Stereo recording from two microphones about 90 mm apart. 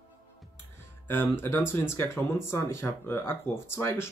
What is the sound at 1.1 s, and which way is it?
Speech, 25° left (ahead or behind).